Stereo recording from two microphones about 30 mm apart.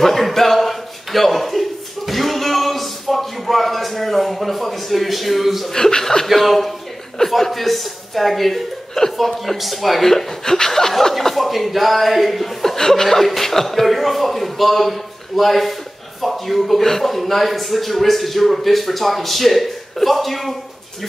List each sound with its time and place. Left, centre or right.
0.0 s a sound: centre
5.7 s speech: centre
6.2 s speech: centre
9.5 s speech: centre
10.0 s speech: centre
11.3 s speech: centre
12.7 s speech: centre